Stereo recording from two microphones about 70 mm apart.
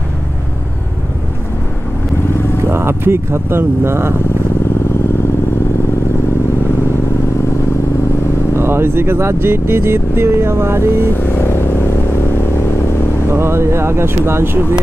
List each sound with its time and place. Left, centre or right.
2.7 s speech: right
8.5 s speech: right
11.1 s vehicle: left
13.3 s speech: right